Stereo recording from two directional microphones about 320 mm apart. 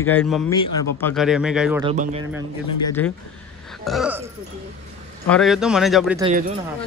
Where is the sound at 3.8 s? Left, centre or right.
Centre.